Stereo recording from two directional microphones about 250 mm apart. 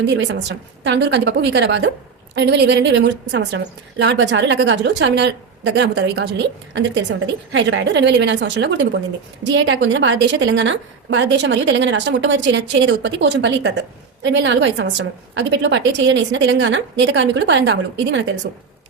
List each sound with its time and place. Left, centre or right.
0.0 s a woman's voice: right